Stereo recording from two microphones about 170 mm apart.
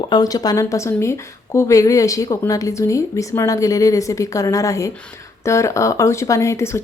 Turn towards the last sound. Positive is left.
turn(degrees=15)  # may be behind; listen again after turning